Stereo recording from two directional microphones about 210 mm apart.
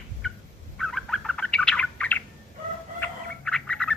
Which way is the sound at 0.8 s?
Centre (ahead or behind).